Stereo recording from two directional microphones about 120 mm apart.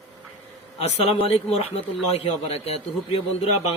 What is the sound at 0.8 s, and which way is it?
Speech, 55° left (ahead or behind).